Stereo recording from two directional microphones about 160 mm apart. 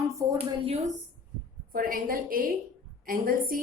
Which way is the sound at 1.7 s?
65° right (ahead or behind).